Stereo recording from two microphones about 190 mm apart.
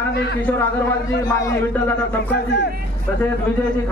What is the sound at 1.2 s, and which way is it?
Speech, 15° left (ahead or behind).